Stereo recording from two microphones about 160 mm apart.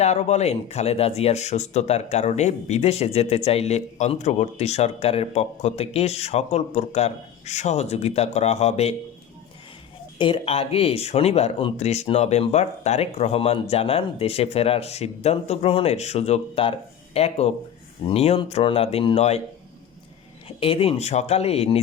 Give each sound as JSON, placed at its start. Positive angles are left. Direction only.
{"t": 0.0, "sound": "speech", "side_deg": 45}
{"t": 10.2, "sound": "speech", "side_deg": 35}
{"t": 20.6, "sound": "speech", "side_deg": 35}